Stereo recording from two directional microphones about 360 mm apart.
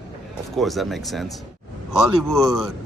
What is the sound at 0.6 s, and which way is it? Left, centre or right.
Speech, centre.